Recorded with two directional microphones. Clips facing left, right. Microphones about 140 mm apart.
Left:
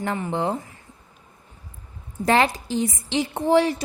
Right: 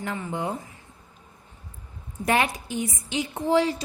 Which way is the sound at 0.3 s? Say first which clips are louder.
Left 5 dB; 80° left.